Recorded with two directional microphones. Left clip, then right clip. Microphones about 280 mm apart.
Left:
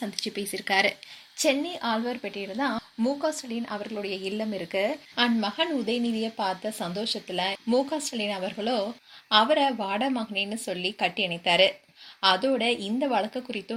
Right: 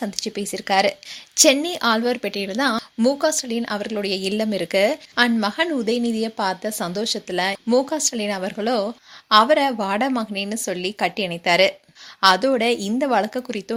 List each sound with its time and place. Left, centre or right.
0.0 s speech: right
1.4 s a woman's voice: right